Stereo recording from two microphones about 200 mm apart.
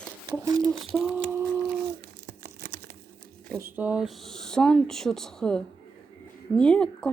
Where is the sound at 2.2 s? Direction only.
50° right (ahead or behind).